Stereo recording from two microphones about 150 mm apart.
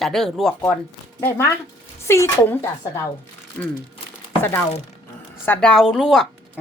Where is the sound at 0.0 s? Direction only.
Centre (ahead or behind).